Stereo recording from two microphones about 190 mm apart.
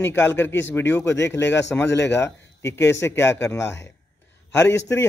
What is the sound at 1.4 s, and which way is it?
Speech, 70° left (ahead or behind).